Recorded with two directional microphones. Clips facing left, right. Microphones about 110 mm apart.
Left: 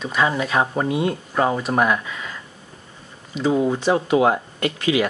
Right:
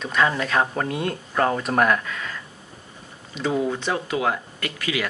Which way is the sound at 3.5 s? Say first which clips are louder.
Left 5 dB; 20° left (ahead or behind).